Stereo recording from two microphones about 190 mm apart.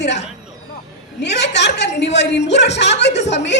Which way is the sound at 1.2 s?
65° left (ahead or behind).